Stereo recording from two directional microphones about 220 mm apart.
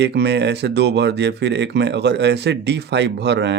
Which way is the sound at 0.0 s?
50° right (ahead or behind).